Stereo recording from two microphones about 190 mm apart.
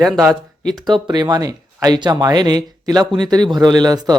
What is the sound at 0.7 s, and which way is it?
Speech, 20° right (ahead or behind).